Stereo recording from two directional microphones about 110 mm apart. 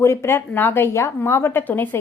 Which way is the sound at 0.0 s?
25° left (ahead or behind).